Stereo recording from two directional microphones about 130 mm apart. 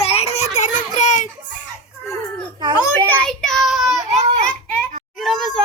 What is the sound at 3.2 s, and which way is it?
Child singing, 5° left (ahead or behind).